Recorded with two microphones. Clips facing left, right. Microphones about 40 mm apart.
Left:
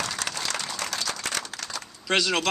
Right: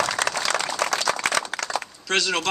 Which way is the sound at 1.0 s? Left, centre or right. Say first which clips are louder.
Right 8 dB; right.